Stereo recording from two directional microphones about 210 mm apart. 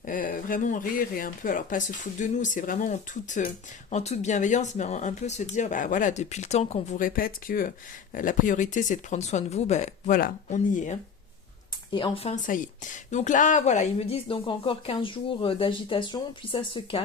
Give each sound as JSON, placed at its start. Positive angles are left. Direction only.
{"t": 0.0, "sound": "speech", "side_deg": 40}
{"t": 11.9, "sound": "a woman's voice", "side_deg": 20}